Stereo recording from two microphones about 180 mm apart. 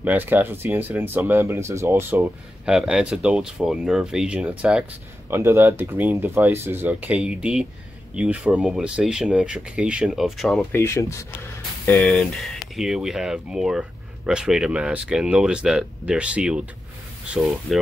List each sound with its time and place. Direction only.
0.0 s speech: 10° right (ahead or behind)
10.7 s speech: 15° left (ahead or behind); by 16.6 s 5° right (ahead or behind)
17.7 s speech: centre (ahead or behind)